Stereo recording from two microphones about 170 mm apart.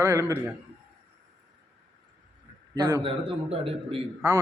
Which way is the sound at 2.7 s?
25° right (ahead or behind).